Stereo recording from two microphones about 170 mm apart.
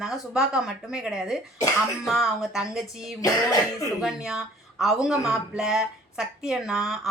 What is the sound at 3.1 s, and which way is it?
Cough, 20° left (ahead or behind).